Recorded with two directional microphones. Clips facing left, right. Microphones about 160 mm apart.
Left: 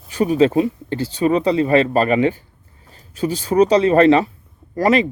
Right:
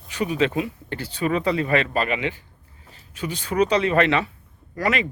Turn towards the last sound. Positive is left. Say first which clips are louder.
# left 8 dB
turn(degrees=35)  # may be behind; listen again after turning